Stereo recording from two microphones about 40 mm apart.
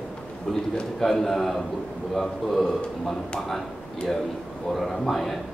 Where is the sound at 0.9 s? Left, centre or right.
Centre.